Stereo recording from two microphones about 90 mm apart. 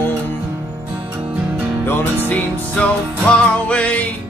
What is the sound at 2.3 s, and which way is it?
Music, 10° left (ahead or behind).